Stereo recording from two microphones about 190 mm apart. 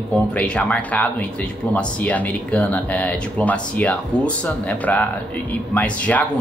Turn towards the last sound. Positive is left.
turn(degrees=5)  # may be behind; listen again after turning